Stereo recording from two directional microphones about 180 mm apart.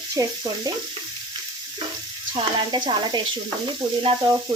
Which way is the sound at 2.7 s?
25° right (ahead or behind).